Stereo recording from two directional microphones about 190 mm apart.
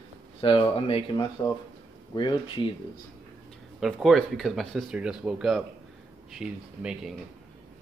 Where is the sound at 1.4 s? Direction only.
20° left (ahead or behind).